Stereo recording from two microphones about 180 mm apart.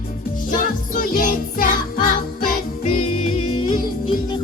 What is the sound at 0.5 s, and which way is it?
Music, 50° left (ahead or behind).